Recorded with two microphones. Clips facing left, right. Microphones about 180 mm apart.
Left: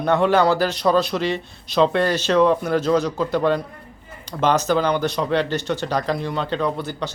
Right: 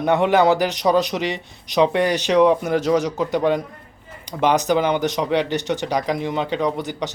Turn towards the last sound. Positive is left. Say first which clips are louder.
# right 1 dB
turn(degrees=-15)  # may be behind; listen again after turning